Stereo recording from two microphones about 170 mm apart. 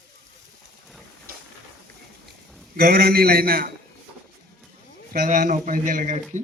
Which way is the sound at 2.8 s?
70° right (ahead or behind).